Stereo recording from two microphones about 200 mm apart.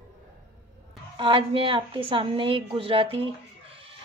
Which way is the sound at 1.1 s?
25° right (ahead or behind).